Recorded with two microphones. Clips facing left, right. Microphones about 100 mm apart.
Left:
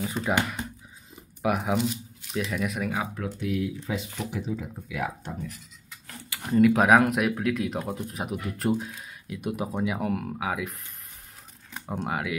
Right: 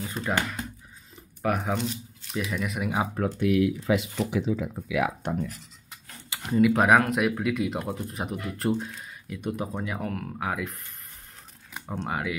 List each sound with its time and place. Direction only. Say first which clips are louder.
0.3 s speech: left 1 dB; 10° left (ahead or behind)
3.3 s speech: right 6 dB; 70° right (ahead or behind); by 5.3 s 90° right
6.5 s speech: left 1 dB; centre (ahead or behind)
11.9 s speech: left 1 dB; 5° left (ahead or behind)